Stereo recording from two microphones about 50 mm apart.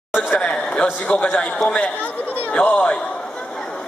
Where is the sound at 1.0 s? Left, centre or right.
Left.